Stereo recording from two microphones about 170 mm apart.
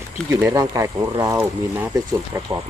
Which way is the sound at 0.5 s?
20° right (ahead or behind).